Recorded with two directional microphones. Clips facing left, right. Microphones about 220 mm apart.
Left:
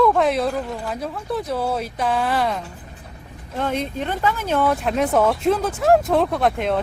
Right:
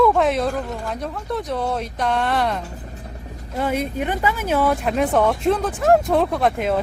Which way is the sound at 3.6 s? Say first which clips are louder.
Right 1 dB; 10° right (ahead or behind).